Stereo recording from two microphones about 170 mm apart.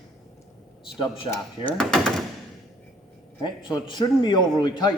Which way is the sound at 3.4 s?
25° left (ahead or behind).